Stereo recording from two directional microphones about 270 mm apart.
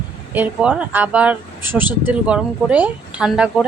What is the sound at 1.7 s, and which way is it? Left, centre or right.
Speech, centre.